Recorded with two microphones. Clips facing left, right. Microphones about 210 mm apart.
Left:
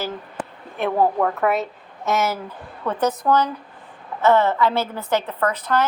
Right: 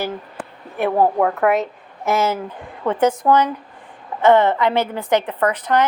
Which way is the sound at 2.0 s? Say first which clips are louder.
Right 3 dB; 30° right (ahead or behind).